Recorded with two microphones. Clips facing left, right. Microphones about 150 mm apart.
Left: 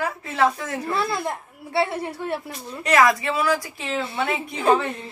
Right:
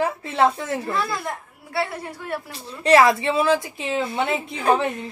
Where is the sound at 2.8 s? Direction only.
30° right (ahead or behind).